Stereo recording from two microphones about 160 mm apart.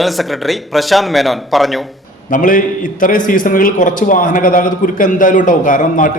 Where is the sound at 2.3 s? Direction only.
55° left (ahead or behind).